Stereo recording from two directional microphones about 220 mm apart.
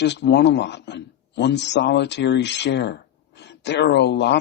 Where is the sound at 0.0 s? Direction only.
50° left (ahead or behind).